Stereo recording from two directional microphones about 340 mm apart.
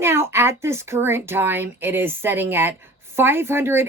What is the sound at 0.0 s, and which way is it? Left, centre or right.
Speech, centre.